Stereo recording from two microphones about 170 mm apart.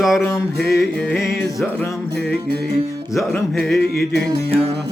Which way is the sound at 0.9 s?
5° left (ahead or behind).